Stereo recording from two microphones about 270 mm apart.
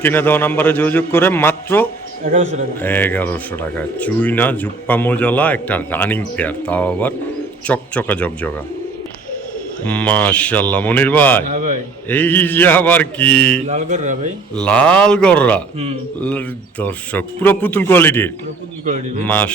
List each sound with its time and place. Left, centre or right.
0.0 s speech: centre
9.8 s speech: centre
11.5 s speech: right
12.0 s speech: centre
13.7 s speech: right
14.5 s speech: centre
19.3 s speech: centre